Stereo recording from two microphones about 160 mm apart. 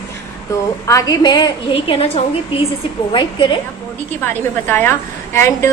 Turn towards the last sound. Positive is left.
turn(degrees=15)  # may be behind; listen again after turning